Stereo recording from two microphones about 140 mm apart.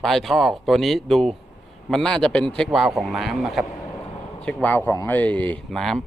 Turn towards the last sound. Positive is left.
turn(degrees=5)  # may be behind; listen again after turning